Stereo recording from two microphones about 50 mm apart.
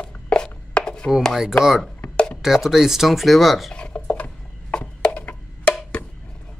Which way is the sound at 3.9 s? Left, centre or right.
Left.